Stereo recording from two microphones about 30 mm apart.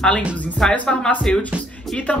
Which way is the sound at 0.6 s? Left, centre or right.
Centre.